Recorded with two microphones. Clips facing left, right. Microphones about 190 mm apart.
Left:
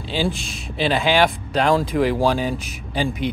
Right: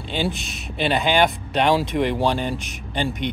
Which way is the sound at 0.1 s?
Centre (ahead or behind).